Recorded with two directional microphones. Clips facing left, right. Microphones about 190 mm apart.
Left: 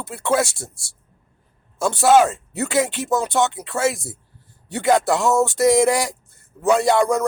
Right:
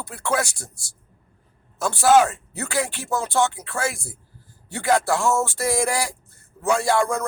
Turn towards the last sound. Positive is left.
turn(degrees=20)  # may be behind; listen again after turning